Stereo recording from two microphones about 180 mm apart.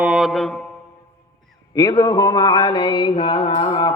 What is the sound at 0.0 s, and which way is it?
Mantra, 5° right (ahead or behind).